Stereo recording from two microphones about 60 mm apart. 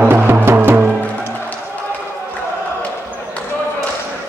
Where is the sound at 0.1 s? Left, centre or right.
Right.